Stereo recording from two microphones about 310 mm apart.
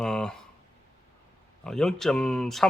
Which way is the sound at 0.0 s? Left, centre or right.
Centre.